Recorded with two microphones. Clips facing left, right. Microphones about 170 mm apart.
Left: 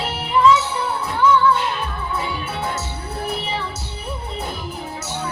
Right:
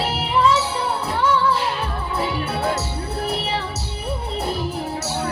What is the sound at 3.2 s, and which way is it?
Music, 70° right (ahead or behind).